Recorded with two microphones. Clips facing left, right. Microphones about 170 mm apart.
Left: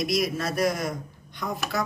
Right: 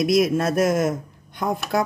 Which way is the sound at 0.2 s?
50° right (ahead or behind).